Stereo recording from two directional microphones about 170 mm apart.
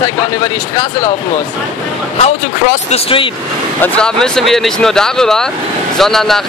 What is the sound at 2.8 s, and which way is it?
Speech, 35° left (ahead or behind).